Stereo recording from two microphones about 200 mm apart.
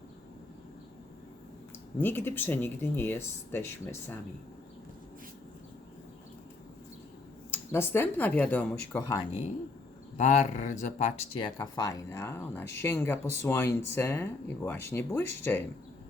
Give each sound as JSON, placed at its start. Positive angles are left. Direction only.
{"t": 2.0, "sound": "speech", "side_deg": 10}
{"t": 7.5, "sound": "speech", "side_deg": 10}
{"t": 10.2, "sound": "speech", "side_deg": 35}
{"t": 11.3, "sound": "speech", "side_deg": 20}